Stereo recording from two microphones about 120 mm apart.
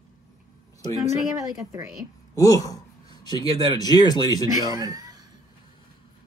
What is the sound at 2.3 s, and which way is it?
Speech, 30° left (ahead or behind).